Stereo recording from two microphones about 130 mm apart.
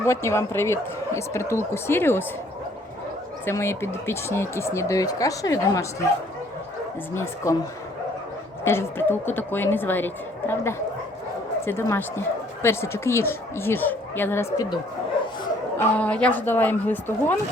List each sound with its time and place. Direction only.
0.0 s a woman's voice: 20° left (ahead or behind)
3.4 s speech: 20° left (ahead or behind)
7.1 s speech: 20° left (ahead or behind)
8.6 s a woman's voice: 20° left (ahead or behind)
16.0 s a woman's voice: 10° left (ahead or behind)